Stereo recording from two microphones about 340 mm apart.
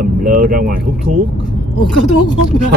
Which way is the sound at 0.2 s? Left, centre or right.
Right.